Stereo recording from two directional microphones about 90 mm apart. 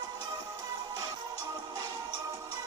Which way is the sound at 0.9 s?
45° right (ahead or behind).